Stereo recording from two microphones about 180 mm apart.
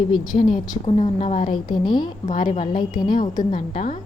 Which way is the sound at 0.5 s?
25° left (ahead or behind).